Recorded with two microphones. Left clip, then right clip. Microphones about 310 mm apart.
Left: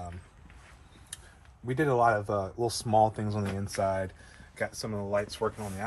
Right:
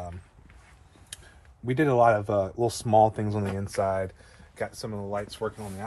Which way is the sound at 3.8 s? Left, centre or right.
Centre.